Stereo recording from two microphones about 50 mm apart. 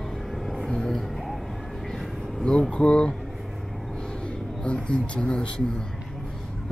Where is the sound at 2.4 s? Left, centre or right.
Centre.